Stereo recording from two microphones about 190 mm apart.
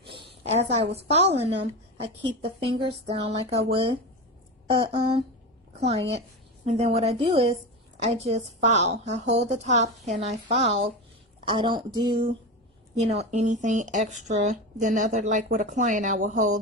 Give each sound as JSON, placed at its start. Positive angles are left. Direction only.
{"t": 0.5, "sound": "speech", "side_deg": -35}
{"t": 4.6, "sound": "a woman's voice", "side_deg": -25}